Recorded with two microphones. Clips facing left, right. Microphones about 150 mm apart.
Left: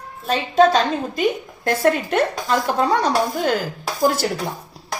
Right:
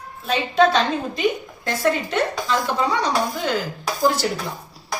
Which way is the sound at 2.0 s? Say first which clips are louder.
Left 3 dB; 55° left (ahead or behind).